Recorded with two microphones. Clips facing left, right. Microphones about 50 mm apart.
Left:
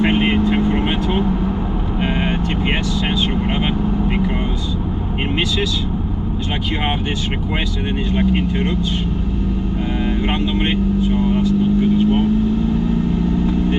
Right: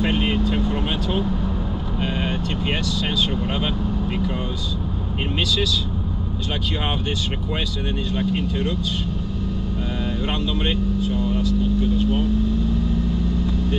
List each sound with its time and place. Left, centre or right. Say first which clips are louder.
0.0 s vehicle: left 5 dB; left
8.1 s speech: left 6 dB; left
10.4 s speech: left 5 dB; left
11.4 s vehicle: left 6 dB; left